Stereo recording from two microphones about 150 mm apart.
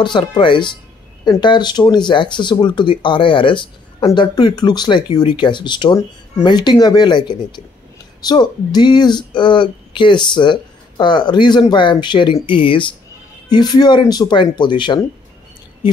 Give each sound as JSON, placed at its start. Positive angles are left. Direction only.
{"t": 0.0, "sound": "speech", "side_deg": 30}